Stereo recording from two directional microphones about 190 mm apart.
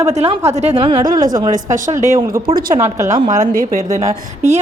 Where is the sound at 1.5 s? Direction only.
40° right (ahead or behind).